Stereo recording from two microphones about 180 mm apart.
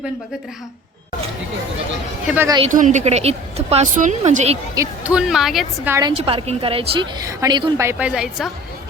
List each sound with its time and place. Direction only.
2.2 s speech: 10° right (ahead or behind)
2.6 s a woman's voice: 40° right (ahead or behind)
5.0 s speech: 5° right (ahead or behind)
5.9 s a woman's voice: 20° right (ahead or behind)
6.1 s a woman's voice: 35° right (ahead or behind)
7.2 s a woman's voice: 20° right (ahead or behind)
7.9 s speech: 5° right (ahead or behind)